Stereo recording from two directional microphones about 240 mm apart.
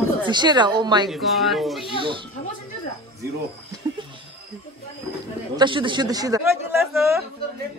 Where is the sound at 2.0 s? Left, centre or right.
Right.